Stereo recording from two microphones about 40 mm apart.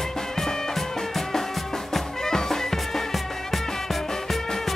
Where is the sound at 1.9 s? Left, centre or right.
Centre.